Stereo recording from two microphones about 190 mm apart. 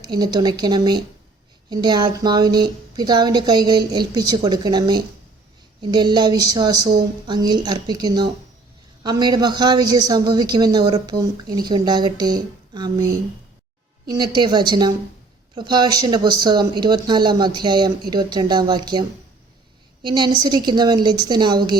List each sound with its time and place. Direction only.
0.0 s a woman's voice: 20° right (ahead or behind)
14.1 s a woman's voice: 25° right (ahead or behind)